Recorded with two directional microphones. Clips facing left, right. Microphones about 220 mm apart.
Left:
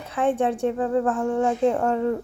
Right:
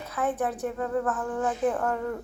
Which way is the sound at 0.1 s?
30° left (ahead or behind).